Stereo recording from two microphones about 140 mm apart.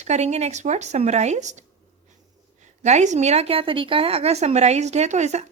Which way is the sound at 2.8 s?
55° right (ahead or behind).